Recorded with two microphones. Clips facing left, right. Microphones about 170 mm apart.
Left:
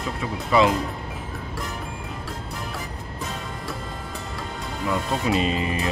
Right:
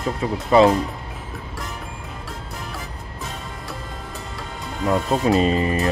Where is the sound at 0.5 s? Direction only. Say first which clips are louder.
Right 5 dB; 40° right (ahead or behind).